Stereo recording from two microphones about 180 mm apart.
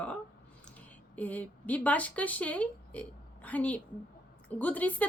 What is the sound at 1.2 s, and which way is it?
A woman's voice, 10° left (ahead or behind).